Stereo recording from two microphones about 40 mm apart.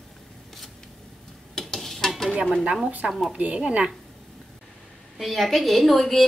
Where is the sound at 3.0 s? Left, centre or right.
Right.